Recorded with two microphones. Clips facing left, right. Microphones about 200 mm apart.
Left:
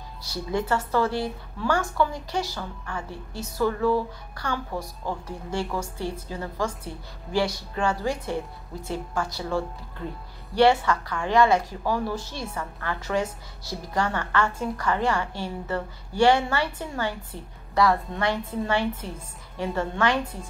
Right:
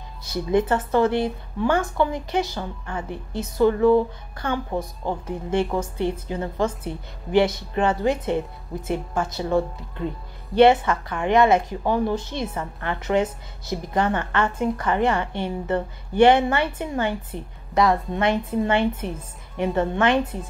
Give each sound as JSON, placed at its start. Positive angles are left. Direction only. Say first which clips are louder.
{"t": 0.2, "sound": "a woman's voice", "louder": "right 7 dB", "side_deg": -20}